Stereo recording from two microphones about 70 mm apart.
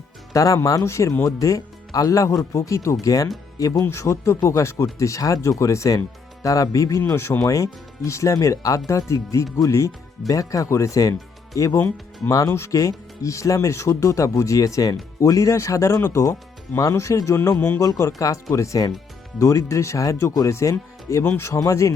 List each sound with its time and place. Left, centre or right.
0.3 s speech: left
7.0 s speech: left
7.4 s speech: left
11.8 s speech: left
12.5 s speech: left